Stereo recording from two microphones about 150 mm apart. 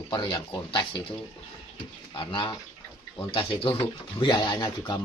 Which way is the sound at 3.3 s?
40° left (ahead or behind).